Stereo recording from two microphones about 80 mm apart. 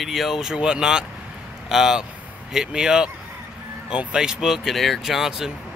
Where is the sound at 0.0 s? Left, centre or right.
Centre.